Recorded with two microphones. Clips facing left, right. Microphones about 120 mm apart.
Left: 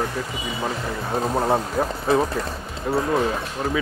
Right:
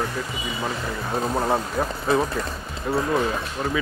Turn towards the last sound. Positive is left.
turn(degrees=30)  # may be behind; listen again after turning